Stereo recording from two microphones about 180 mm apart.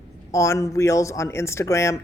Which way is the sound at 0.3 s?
15° left (ahead or behind).